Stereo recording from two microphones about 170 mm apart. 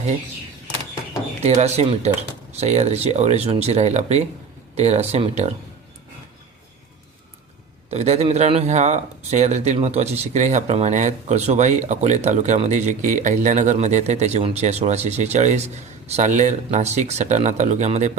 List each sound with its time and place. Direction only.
1.4 s speech: 40° right (ahead or behind)
7.9 s speech: 40° right (ahead or behind)